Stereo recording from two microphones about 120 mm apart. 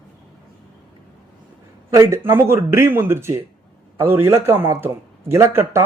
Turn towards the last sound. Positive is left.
turn(degrees=-20)  # may be behind; listen again after turning